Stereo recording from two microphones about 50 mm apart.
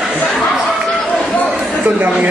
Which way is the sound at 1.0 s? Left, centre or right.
Centre.